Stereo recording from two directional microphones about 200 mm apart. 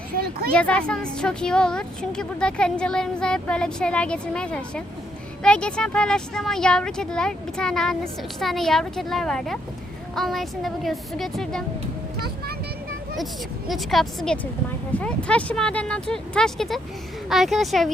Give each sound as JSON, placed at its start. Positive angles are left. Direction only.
{"t": 0.5, "sound": "a woman's voice", "side_deg": 5}
{"t": 13.7, "sound": "a woman's voice", "side_deg": 0}